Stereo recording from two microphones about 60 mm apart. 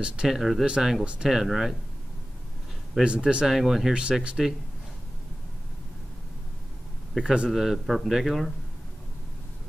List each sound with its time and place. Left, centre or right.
0.0 s speech: centre
0.4 s a man's voice: centre
0.7 s speech: centre
3.0 s speech: centre
3.4 s a man's voice: centre
7.2 s a man's voice: centre